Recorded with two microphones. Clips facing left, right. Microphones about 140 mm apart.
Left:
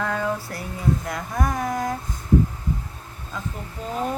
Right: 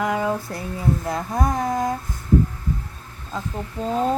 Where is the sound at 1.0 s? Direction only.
25° right (ahead or behind).